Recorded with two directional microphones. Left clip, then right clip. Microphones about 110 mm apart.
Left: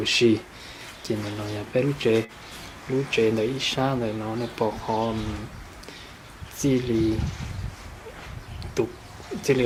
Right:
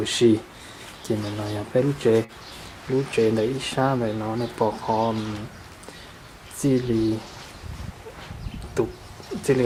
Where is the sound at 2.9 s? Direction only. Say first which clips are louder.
Right 2 dB; 20° right (ahead or behind).